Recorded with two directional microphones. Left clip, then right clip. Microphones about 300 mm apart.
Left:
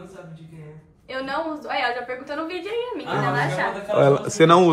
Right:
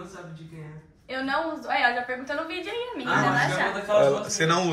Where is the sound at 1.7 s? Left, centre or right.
Left.